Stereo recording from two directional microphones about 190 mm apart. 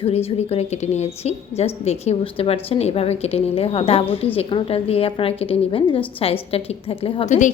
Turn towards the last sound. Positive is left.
turn(degrees=40)  # may be behind; listen again after turning